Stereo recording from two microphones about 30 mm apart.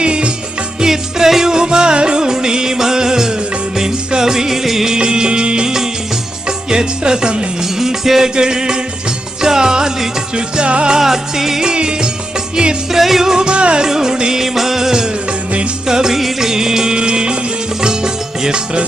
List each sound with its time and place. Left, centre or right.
0.0 s music: right
0.8 s music: centre
1.5 s music: right; by 4.9 s centre
4.9 s music: right
7.8 s music: centre
8.4 s music: right
10.3 s music: right
10.9 s music: centre
11.6 s music: right
12.9 s music: centre
13.3 s music: right
13.8 s music: centre
14.4 s music: centre
16.1 s music: centre